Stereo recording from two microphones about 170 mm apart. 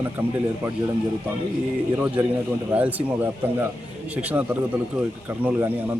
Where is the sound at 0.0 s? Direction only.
15° right (ahead or behind).